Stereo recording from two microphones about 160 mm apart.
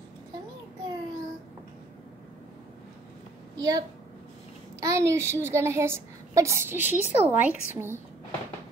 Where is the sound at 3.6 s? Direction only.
25° right (ahead or behind).